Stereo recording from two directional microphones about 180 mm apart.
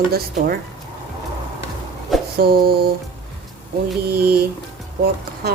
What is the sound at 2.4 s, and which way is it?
Speech, 60° right (ahead or behind).